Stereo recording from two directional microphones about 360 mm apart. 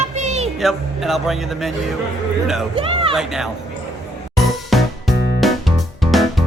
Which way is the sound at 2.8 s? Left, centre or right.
Centre.